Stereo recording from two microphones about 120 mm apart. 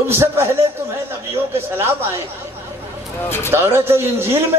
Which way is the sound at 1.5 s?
20° right (ahead or behind).